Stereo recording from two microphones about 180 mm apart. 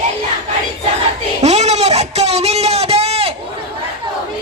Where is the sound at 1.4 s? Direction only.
40° right (ahead or behind).